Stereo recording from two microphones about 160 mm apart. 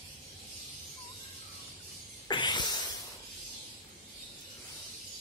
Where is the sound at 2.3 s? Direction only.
30° left (ahead or behind).